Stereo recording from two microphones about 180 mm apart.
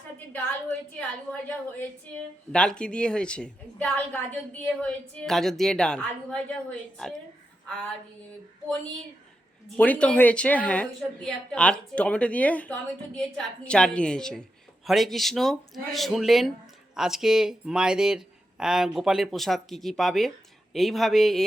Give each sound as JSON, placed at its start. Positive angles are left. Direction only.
{"t": 0.3, "sound": "a woman's voice", "side_deg": 5}
{"t": 9.7, "sound": "a woman's voice", "side_deg": 10}